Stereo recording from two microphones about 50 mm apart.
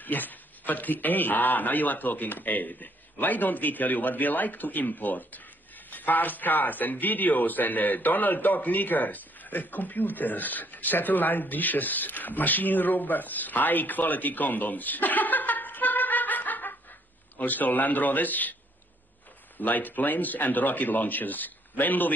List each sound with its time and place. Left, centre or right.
0.0 s a man's voice: left
19.6 s a man's voice: left